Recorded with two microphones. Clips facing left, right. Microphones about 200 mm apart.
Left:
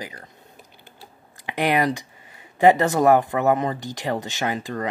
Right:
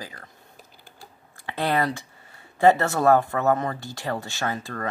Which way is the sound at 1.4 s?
15° left (ahead or behind).